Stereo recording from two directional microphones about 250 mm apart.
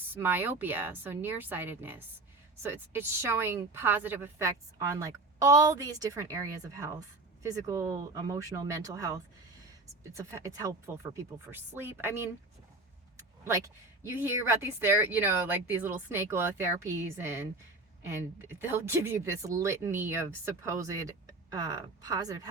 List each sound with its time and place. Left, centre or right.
0.1 s speech: centre
7.7 s speech: centre
10.2 s speech: centre
14.0 s speech: centre